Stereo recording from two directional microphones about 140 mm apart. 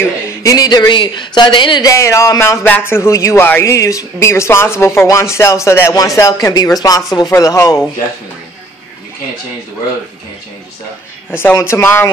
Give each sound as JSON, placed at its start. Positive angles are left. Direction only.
{"t": 0.0, "sound": "speech", "side_deg": 20}
{"t": 1.9, "sound": "speech", "side_deg": 20}
{"t": 11.2, "sound": "speech", "side_deg": 15}